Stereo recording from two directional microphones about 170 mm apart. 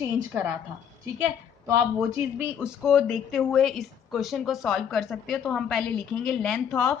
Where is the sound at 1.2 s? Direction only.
15° right (ahead or behind).